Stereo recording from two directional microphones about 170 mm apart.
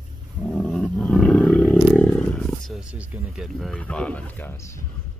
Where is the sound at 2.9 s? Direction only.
5° right (ahead or behind).